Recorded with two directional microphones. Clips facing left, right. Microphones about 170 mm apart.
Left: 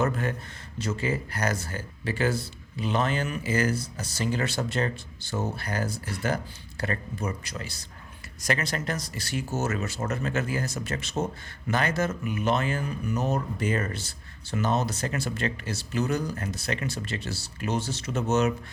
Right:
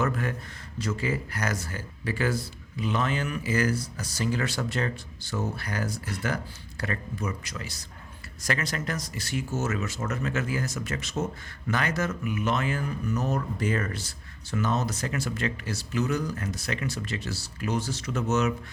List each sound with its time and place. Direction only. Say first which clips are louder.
0.0 s speech: left 1 dB; 25° left (ahead or behind)